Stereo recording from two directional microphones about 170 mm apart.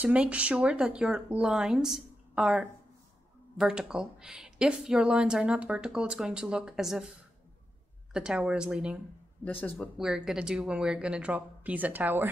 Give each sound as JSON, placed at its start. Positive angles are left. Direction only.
{"t": 0.0, "sound": "speech", "side_deg": -5}
{"t": 8.1, "sound": "speech", "side_deg": -5}
{"t": 9.4, "sound": "speech", "side_deg": 10}
{"t": 9.9, "sound": "speech", "side_deg": -5}